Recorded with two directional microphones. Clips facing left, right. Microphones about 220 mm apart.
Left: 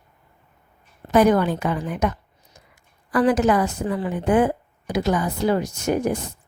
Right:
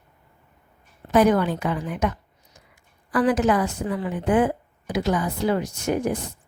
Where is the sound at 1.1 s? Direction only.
45° left (ahead or behind).